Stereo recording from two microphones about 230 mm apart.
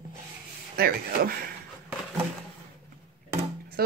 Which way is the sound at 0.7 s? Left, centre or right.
Right.